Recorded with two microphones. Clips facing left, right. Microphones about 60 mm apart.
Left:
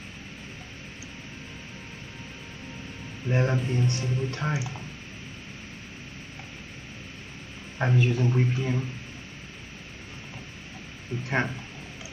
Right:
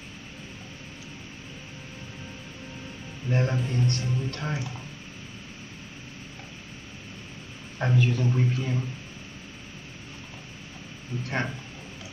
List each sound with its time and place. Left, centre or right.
3.3 s speech: centre
7.8 s a man's voice: centre
11.1 s speech: left